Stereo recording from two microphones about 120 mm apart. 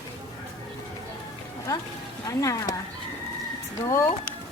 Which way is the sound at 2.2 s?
25° left (ahead or behind).